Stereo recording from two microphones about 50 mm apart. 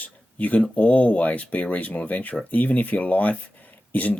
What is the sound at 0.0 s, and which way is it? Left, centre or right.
Speech, left.